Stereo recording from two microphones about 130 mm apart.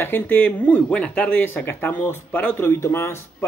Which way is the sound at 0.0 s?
15° left (ahead or behind).